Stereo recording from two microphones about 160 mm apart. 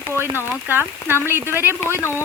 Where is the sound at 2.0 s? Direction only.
15° left (ahead or behind).